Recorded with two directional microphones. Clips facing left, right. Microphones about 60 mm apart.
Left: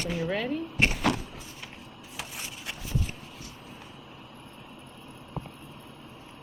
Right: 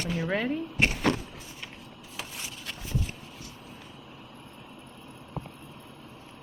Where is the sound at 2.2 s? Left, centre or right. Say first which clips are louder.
Even; centre.